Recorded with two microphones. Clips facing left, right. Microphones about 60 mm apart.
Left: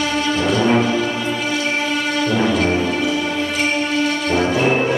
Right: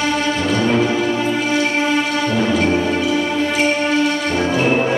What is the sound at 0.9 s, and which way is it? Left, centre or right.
Music, centre.